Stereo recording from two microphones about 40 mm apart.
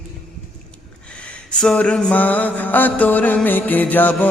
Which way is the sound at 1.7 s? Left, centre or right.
Left.